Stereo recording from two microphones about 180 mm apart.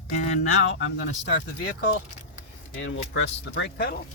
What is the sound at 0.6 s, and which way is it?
Speech, 85° left.